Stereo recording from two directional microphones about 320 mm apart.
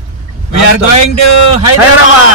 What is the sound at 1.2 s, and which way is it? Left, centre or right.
Speech, left.